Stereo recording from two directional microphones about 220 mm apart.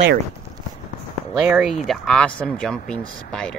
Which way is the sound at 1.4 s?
5° right (ahead or behind).